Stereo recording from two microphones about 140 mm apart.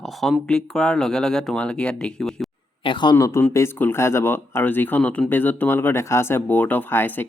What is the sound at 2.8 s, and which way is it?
Speech, 35° left (ahead or behind).